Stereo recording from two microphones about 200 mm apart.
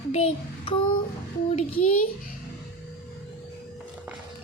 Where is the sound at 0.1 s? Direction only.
30° left (ahead or behind).